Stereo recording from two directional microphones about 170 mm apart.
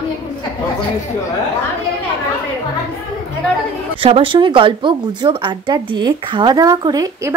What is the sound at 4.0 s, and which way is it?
Speech, 30° right (ahead or behind).